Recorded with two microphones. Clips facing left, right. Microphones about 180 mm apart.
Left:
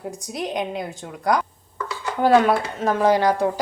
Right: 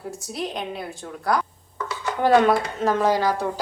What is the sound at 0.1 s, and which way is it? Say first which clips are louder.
A woman's voice: left 2 dB; 20° left (ahead or behind).